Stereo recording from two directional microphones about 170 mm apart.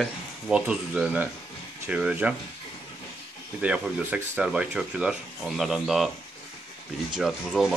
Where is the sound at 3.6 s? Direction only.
5° right (ahead or behind).